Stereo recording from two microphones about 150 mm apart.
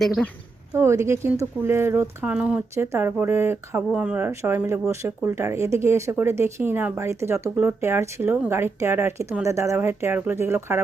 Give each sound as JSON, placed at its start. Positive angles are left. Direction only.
{"t": 0.0, "sound": "speech", "side_deg": 0}
{"t": 0.7, "sound": "speech", "side_deg": -20}